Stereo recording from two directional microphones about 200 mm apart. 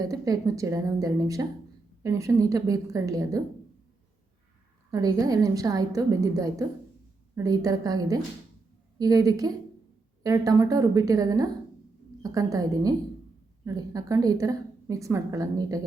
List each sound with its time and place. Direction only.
0.0 s a woman's voice: 15° right (ahead or behind)
4.9 s a woman's voice: 15° right (ahead or behind)